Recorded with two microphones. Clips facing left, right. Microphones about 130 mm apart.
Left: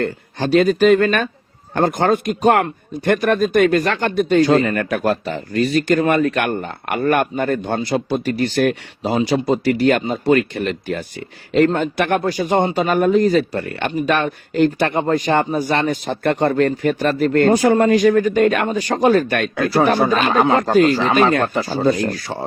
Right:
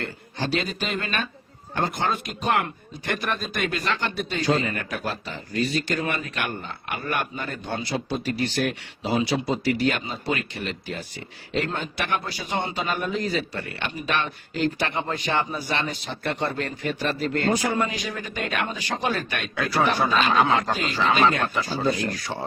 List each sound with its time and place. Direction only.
0.0 s speech: 50° left (ahead or behind)